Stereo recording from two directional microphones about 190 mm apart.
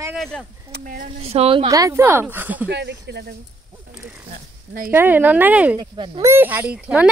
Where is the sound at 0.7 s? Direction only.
50° right (ahead or behind).